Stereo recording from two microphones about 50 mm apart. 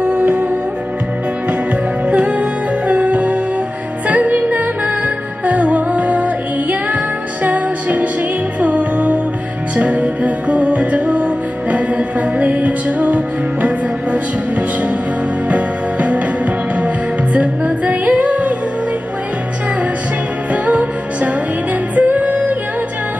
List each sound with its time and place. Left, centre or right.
0.0 s music: right
2.0 s music: right
15.4 s music: right
20.6 s music: right